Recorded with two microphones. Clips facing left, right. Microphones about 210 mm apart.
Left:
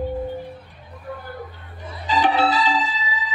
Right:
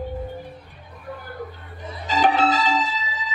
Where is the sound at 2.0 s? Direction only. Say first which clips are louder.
Even; 45° right (ahead or behind).